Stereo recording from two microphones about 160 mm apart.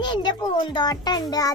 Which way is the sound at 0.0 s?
30° left (ahead or behind).